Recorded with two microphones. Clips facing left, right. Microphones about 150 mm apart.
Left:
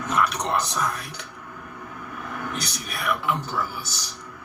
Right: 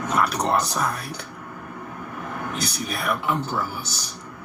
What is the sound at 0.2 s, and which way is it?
Speech, 35° right (ahead or behind).